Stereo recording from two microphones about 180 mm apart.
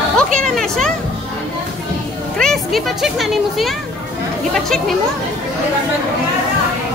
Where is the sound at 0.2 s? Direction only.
5° left (ahead or behind).